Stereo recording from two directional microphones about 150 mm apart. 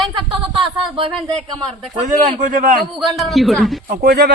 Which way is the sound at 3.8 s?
75° right (ahead or behind).